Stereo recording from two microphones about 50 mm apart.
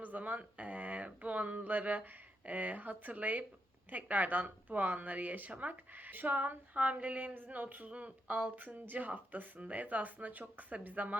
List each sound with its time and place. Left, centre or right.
0.0 s speech: right